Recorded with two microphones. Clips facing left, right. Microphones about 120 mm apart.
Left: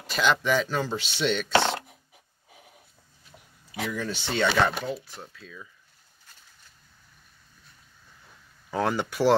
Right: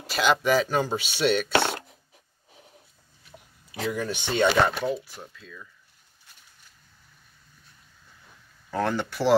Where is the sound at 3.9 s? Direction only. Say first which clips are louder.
Right 3 dB; 15° right (ahead or behind).